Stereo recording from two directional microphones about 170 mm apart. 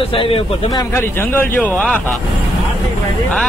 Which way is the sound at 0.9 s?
10° left (ahead or behind).